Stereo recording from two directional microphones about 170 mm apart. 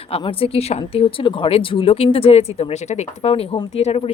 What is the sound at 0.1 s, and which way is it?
Speech, 35° left (ahead or behind).